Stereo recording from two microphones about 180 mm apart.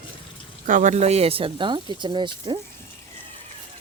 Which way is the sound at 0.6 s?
45° right (ahead or behind).